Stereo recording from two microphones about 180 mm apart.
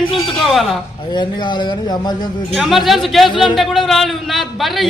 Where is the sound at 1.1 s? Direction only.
25° left (ahead or behind).